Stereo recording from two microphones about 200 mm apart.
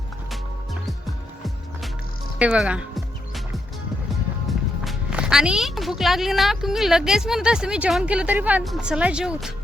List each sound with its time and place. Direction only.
0.3 s music: centre (ahead or behind)
2.4 s music: 5° right (ahead or behind)
4.1 s speech: centre (ahead or behind)